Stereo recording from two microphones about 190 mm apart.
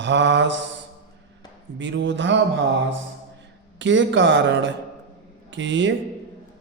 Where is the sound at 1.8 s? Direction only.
70° right (ahead or behind).